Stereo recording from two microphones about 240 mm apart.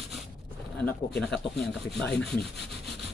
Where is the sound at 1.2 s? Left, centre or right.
Centre.